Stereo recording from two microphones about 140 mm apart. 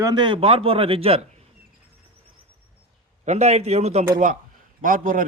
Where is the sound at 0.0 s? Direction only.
30° right (ahead or behind).